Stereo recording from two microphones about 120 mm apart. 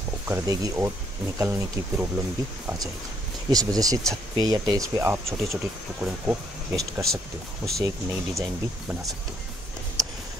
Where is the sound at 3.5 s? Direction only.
30° right (ahead or behind).